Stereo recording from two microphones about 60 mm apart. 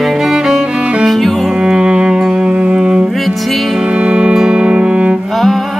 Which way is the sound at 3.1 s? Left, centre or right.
Centre.